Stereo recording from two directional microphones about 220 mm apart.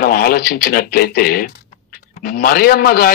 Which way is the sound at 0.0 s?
45° left (ahead or behind).